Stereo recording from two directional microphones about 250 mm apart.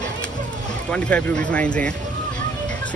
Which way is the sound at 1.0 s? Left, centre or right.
Centre.